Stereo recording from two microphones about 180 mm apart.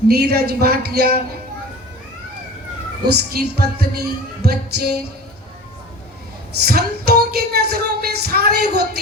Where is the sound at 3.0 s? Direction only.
60° right (ahead or behind).